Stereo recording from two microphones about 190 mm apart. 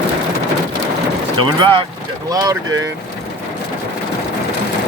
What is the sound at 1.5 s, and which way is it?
Speech, 25° right (ahead or behind).